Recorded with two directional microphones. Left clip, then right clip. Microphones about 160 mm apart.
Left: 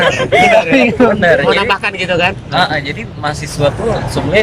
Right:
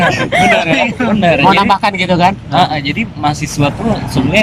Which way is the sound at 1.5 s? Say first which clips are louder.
Right 3 dB; 25° right (ahead or behind).